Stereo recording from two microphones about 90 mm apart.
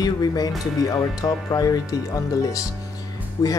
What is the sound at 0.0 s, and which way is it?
Speech, 45° left (ahead or behind).